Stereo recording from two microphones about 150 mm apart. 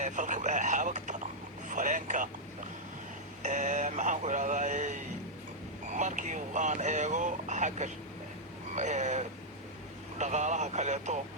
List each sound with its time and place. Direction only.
0.0 s vehicle: 55° right (ahead or behind)
3.4 s a sound: 50° right (ahead or behind)
5.9 s vehicle: 50° right (ahead or behind)